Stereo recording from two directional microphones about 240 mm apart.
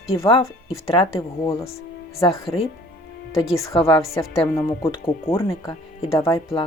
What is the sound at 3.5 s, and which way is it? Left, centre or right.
Speech, centre.